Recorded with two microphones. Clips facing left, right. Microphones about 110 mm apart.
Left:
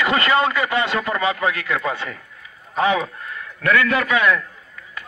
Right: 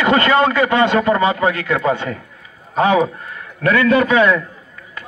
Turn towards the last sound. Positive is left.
turn(degrees=-30)  # may be behind; listen again after turning